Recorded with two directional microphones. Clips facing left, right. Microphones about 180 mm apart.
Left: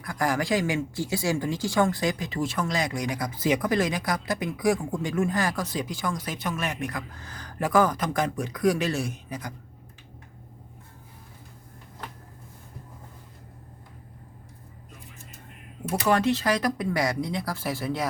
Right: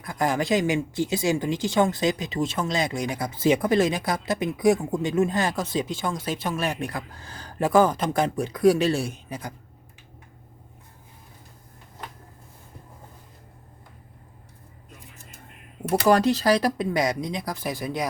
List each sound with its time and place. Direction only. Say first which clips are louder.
0.0 s speech: right 2 dB; 25° right (ahead or behind)
16.0 s speech: right 4 dB; 40° right (ahead or behind); by 18.1 s 15° right (ahead or behind)